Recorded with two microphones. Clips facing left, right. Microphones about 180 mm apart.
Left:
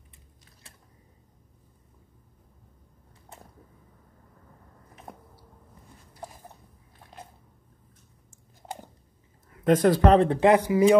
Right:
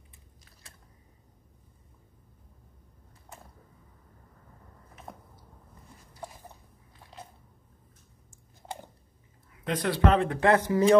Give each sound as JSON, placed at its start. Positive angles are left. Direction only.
{"t": 9.5, "sound": "speech", "side_deg": 45}
{"t": 10.4, "sound": "speech", "side_deg": 15}